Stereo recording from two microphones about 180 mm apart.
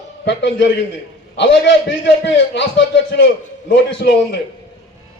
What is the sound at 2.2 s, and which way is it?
A man's voice, 90° left.